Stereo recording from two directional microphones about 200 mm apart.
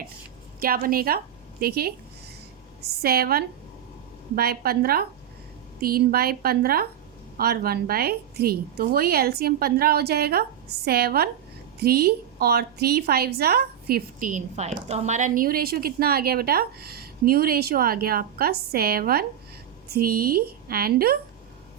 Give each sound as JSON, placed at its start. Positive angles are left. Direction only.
{"t": 0.6, "sound": "a woman's voice", "side_deg": -45}